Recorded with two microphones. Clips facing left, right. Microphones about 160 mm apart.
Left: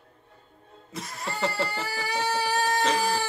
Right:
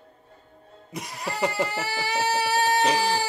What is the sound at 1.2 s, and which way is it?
Speech, 10° right (ahead or behind).